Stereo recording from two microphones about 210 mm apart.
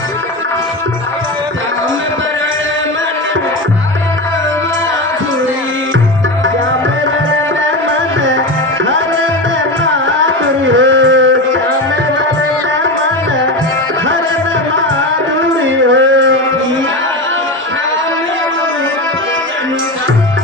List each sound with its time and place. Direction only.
9.8 s music: 65° right (ahead or behind)
15.4 s music: 65° right (ahead or behind)